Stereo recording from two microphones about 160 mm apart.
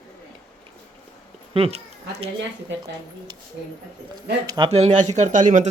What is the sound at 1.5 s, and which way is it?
Speech, 40° right (ahead or behind).